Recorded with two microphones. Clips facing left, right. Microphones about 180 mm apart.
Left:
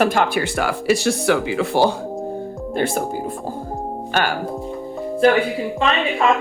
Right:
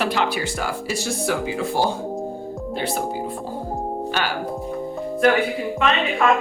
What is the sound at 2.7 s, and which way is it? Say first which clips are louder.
Speech: left 5 dB; 50° left (ahead or behind).